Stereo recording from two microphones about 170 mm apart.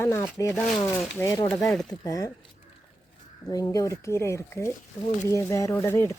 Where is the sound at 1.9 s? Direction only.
20° left (ahead or behind).